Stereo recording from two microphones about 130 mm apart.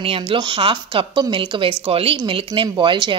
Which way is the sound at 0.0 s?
45° right (ahead or behind).